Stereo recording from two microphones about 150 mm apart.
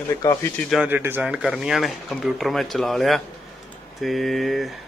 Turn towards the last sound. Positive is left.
turn(degrees=0)  # may be behind; listen again after turning